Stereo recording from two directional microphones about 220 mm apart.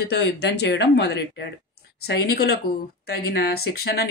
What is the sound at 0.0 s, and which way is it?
Speech, 50° left (ahead or behind).